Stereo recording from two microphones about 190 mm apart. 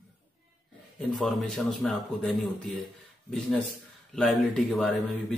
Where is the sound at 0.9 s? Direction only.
Centre (ahead or behind).